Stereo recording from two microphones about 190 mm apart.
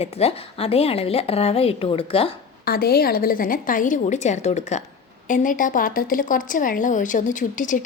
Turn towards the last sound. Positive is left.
turn(degrees=45)  # may be behind; listen again after turning